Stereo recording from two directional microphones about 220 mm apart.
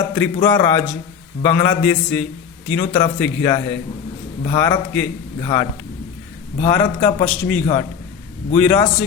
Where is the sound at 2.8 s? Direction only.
25° left (ahead or behind).